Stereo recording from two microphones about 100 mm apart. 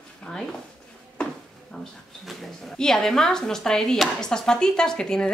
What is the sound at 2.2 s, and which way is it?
Speech, centre (ahead or behind).